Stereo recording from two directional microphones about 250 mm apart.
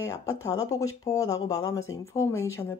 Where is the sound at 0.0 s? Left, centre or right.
Centre.